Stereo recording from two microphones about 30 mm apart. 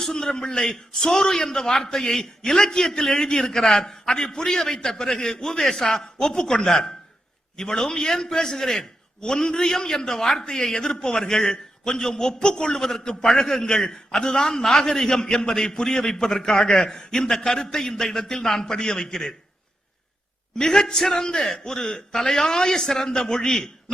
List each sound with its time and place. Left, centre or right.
0.3 s a man's voice: left
20.6 s a man's voice: left